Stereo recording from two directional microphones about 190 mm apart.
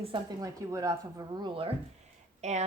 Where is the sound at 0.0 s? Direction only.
25° right (ahead or behind).